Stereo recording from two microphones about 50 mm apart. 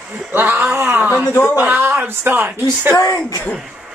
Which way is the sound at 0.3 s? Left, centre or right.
Right.